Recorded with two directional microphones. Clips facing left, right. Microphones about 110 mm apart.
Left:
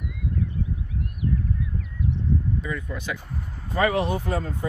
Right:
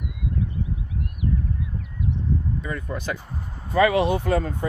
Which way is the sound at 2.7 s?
40° right (ahead or behind).